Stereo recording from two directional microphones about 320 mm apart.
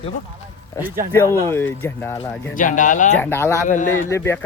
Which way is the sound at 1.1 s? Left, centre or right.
Centre.